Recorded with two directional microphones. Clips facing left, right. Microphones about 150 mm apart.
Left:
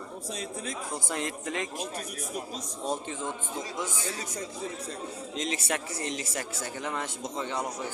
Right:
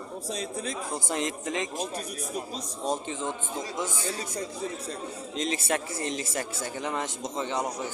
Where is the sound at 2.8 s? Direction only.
20° right (ahead or behind).